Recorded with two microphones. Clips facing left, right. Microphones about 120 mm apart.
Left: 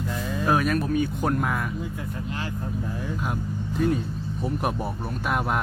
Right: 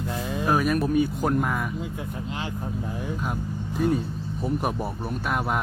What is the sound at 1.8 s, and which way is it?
Speech, 20° right (ahead or behind).